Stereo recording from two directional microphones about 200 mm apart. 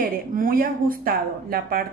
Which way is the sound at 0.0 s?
45° right (ahead or behind).